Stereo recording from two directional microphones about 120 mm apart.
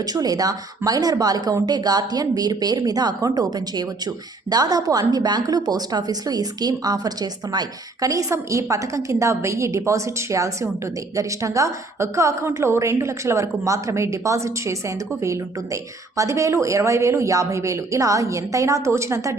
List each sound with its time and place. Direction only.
0.0 s a woman's voice: 30° right (ahead or behind)